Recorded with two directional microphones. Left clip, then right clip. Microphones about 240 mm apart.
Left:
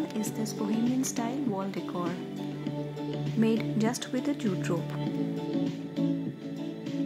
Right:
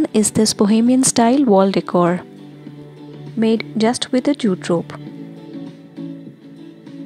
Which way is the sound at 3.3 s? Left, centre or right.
Right.